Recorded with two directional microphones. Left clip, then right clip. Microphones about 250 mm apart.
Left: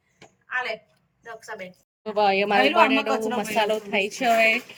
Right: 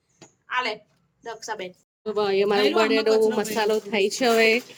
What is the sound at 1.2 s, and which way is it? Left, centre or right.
Speech, right.